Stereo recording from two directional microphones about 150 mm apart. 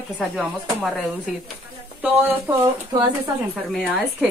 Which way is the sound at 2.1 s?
15° right (ahead or behind).